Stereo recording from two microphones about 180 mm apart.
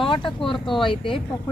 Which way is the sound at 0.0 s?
30° left (ahead or behind).